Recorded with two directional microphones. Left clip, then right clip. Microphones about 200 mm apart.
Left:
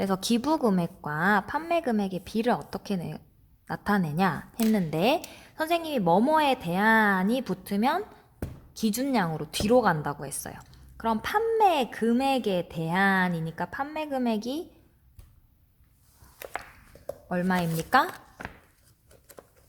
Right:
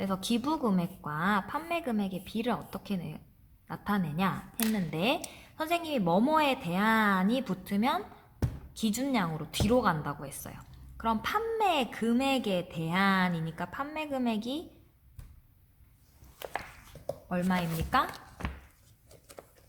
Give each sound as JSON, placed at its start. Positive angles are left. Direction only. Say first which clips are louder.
{"t": 0.0, "sound": "a woman's voice", "louder": "left 5 dB", "side_deg": 45}
{"t": 17.2, "sound": "a woman's voice", "louder": "left 5 dB", "side_deg": 40}